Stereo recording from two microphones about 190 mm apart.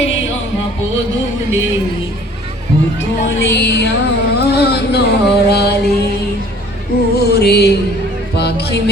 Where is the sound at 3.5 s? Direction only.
65° left (ahead or behind).